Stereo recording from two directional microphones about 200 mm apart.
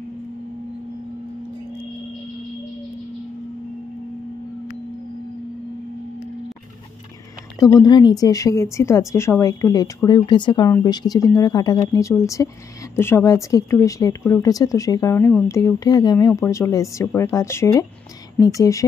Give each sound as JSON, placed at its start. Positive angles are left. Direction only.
{"t": 7.5, "sound": "speech", "side_deg": 15}